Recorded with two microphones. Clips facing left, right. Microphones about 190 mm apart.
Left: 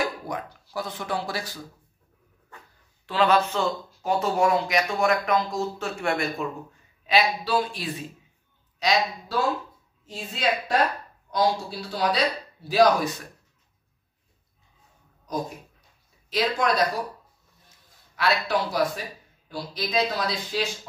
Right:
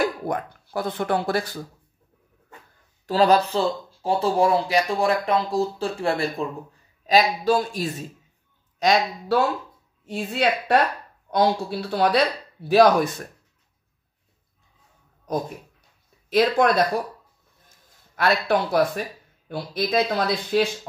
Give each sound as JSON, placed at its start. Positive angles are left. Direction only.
{"t": 0.3, "sound": "speech", "side_deg": -55}
{"t": 3.1, "sound": "speech", "side_deg": -40}
{"t": 7.1, "sound": "a man's voice", "side_deg": -45}
{"t": 10.0, "sound": "a man's voice", "side_deg": -60}
{"t": 16.3, "sound": "a man's voice", "side_deg": -55}
{"t": 17.6, "sound": "a sound", "side_deg": -50}
{"t": 19.5, "sound": "speech", "side_deg": -55}